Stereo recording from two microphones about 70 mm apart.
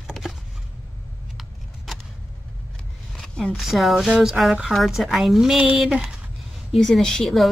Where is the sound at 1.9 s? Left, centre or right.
Centre.